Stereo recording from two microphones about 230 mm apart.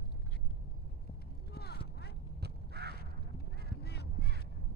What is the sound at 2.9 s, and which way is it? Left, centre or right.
Honk, left.